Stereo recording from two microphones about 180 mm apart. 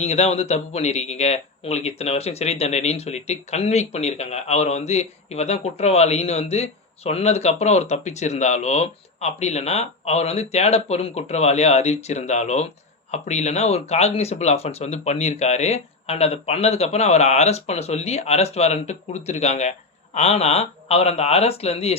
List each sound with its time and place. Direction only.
0.0 s speech: 35° left (ahead or behind)